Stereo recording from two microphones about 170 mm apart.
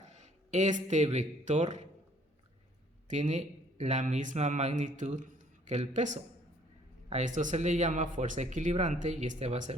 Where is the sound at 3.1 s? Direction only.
45° right (ahead or behind).